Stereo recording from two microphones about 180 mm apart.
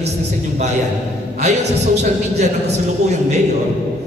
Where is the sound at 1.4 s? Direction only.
40° right (ahead or behind).